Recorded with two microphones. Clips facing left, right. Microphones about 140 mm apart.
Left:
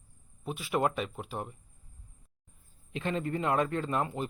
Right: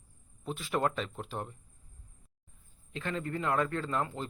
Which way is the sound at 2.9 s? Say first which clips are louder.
Left 3 dB; 20° left (ahead or behind).